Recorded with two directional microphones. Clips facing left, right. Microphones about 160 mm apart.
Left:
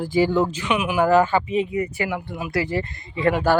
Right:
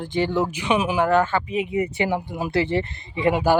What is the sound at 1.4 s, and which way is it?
Speech, 5° right (ahead or behind).